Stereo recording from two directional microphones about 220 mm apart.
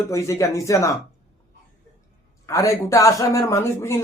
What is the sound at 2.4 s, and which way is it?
Speech, 15° left (ahead or behind).